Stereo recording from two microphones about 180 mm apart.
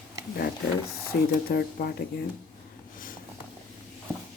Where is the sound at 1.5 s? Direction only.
55° left (ahead or behind).